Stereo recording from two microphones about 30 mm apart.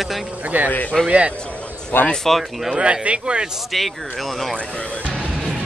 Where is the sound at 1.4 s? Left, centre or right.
Left.